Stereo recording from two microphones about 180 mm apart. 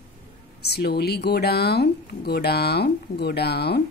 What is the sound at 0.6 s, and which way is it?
A woman's voice, 65° left (ahead or behind).